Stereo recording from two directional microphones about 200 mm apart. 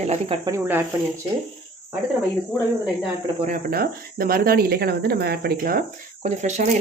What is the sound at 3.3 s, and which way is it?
Speech, 40° right (ahead or behind).